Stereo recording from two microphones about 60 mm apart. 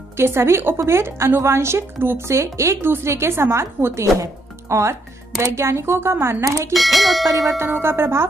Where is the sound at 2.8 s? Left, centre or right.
Right.